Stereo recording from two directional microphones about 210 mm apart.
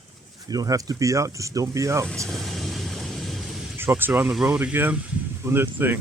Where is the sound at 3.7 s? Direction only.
10° right (ahead or behind).